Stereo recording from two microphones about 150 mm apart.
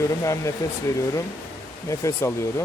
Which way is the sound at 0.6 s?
20° left (ahead or behind).